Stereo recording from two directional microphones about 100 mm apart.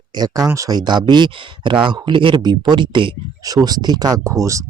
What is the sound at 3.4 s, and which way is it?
Speech, 40° right (ahead or behind).